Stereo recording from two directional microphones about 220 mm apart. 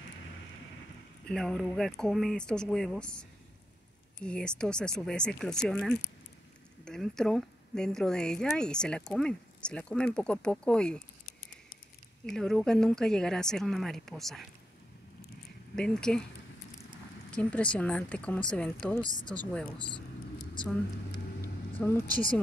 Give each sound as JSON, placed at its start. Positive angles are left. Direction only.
{"t": 1.2, "sound": "a woman's voice", "side_deg": 5}
{"t": 12.3, "sound": "a woman's voice", "side_deg": 0}
{"t": 15.7, "sound": "a woman's voice", "side_deg": 5}
{"t": 17.3, "sound": "a woman's voice", "side_deg": 5}
{"t": 19.9, "sound": "vehicle", "side_deg": 20}
{"t": 21.7, "sound": "speech", "side_deg": 10}